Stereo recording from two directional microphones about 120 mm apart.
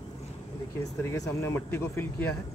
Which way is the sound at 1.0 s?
25° left (ahead or behind).